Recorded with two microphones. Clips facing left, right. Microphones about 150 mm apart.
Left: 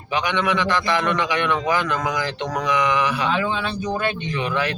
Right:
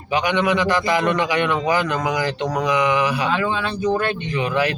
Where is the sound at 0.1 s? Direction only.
10° right (ahead or behind).